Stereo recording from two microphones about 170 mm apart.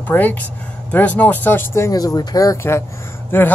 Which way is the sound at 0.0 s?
10° left (ahead or behind).